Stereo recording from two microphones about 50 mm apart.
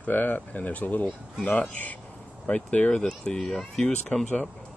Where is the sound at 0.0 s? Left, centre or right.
Left.